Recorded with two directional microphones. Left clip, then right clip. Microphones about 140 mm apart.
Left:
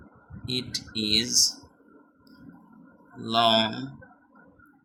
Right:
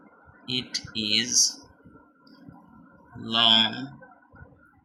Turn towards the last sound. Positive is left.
turn(degrees=65)  # may be behind; listen again after turning